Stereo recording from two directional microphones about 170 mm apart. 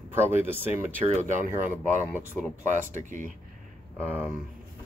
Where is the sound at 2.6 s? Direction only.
45° right (ahead or behind).